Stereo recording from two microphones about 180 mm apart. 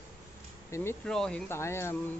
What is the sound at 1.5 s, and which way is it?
Speech, 15° left (ahead or behind).